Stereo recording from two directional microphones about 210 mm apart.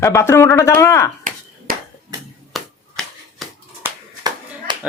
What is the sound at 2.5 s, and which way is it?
Finger snapping, centre (ahead or behind).